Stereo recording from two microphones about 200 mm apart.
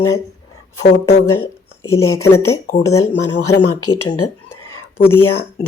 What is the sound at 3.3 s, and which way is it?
Speech, 75° left (ahead or behind).